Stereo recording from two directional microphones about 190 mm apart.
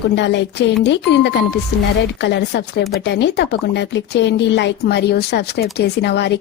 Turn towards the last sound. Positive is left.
turn(degrees=60)  # may be behind; listen again after turning